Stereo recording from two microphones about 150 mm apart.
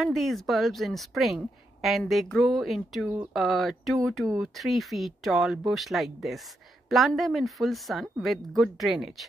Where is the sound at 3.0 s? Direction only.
10° right (ahead or behind).